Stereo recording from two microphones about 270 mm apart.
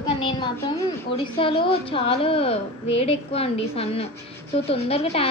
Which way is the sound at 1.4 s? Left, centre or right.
Centre.